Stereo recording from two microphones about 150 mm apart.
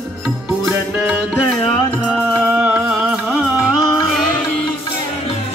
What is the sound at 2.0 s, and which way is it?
Music, 10° right (ahead or behind).